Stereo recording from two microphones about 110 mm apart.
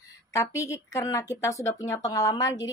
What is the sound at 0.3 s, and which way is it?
Speech, 30° left (ahead or behind).